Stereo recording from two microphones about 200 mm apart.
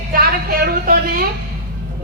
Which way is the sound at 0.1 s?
45° right (ahead or behind).